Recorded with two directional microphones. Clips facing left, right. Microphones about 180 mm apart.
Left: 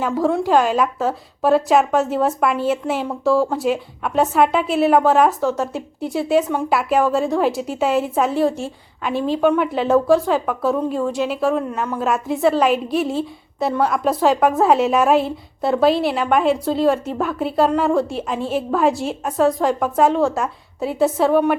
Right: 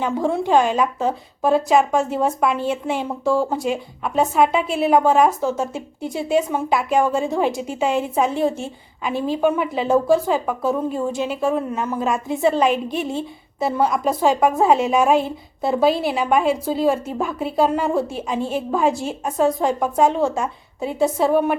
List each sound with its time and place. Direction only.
0.0 s a woman's voice: centre (ahead or behind)